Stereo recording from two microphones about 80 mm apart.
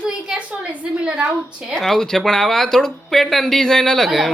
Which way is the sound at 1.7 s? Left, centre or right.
Centre.